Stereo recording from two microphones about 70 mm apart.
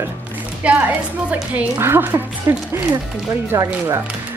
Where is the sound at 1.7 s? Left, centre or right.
Right.